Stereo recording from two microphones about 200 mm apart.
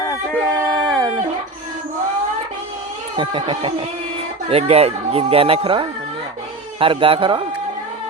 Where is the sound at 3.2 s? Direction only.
25° right (ahead or behind).